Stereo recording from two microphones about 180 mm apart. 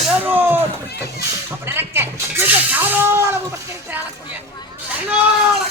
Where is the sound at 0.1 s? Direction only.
10° right (ahead or behind).